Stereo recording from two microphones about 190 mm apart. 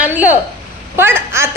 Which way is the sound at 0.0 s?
10° right (ahead or behind).